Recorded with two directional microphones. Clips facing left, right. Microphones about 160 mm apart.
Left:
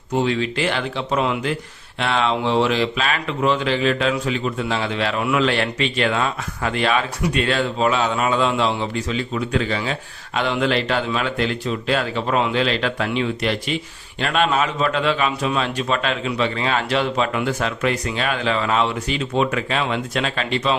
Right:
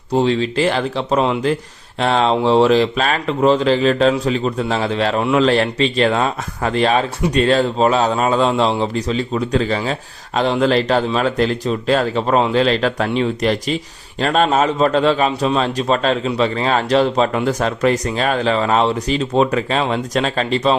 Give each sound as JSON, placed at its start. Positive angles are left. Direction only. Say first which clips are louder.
{"t": 0.1, "sound": "speech", "louder": "right 4 dB", "side_deg": -35}